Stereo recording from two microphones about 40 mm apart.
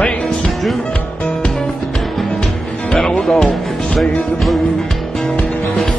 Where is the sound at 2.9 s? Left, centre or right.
Left.